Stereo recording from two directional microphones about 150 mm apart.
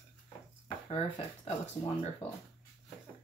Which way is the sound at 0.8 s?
40° left (ahead or behind).